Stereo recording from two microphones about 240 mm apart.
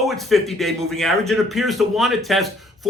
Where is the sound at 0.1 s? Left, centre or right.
Centre.